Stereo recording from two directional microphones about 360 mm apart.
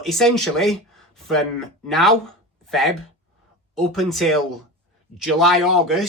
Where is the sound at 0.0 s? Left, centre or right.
Centre.